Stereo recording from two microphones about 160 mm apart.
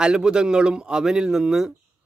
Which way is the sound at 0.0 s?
5° right (ahead or behind).